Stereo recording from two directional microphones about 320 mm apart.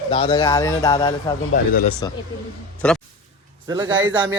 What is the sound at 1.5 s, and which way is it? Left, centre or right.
Speech, left.